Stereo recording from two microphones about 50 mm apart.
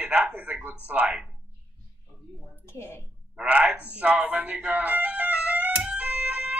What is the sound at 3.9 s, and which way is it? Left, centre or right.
Music, right.